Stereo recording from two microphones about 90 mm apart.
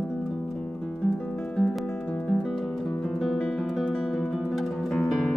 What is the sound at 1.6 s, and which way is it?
Music, 5° left (ahead or behind).